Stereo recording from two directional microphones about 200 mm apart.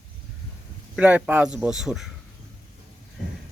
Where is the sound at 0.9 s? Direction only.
5° right (ahead or behind).